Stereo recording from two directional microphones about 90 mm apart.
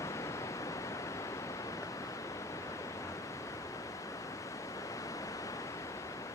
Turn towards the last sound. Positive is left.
turn(degrees=40)  # may be behind; listen again after turning